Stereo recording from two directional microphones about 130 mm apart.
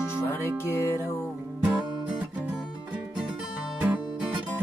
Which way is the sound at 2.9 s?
10° right (ahead or behind).